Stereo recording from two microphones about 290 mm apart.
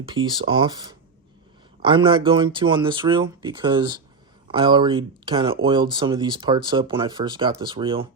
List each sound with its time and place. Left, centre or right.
0.1 s speech: centre